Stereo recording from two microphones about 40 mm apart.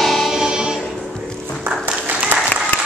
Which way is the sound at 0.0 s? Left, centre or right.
Centre.